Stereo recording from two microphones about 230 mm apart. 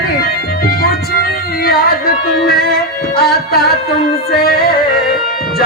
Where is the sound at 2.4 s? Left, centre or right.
Left.